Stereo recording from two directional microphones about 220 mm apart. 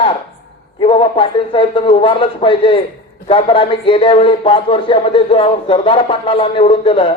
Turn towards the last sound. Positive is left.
turn(degrees=25)  # may be behind; listen again after turning